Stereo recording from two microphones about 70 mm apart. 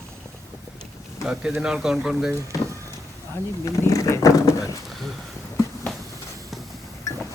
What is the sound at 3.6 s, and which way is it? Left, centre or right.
Roaring cats, left.